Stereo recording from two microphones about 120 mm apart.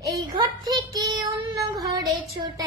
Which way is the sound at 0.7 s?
30° right (ahead or behind).